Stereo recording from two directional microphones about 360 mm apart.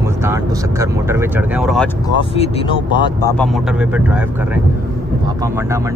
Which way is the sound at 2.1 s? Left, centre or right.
Centre.